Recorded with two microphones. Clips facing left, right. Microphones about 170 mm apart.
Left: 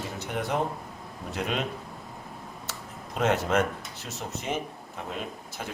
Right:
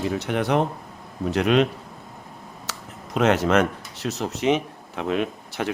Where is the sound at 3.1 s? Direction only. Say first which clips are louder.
Right 6 dB; 85° right.